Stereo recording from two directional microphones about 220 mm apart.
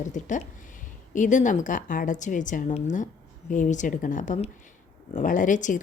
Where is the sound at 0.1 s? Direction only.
35° left (ahead or behind).